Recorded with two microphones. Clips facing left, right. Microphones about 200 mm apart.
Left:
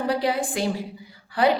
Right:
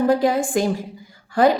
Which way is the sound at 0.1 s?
45° right (ahead or behind).